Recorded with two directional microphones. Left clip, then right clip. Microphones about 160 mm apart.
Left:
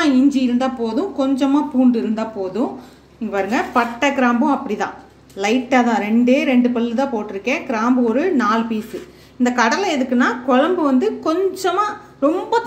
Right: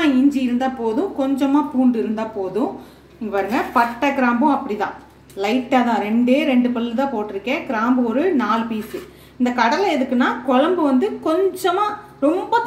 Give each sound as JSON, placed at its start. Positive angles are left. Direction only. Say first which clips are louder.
{"t": 0.0, "sound": "a woman's voice", "louder": "left 1 dB", "side_deg": 20}